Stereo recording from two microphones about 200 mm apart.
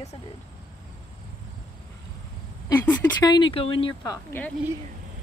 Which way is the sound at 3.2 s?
20° left (ahead or behind).